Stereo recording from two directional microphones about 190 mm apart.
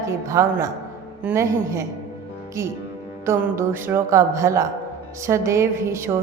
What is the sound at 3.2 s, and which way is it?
A woman's voice, 15° right (ahead or behind).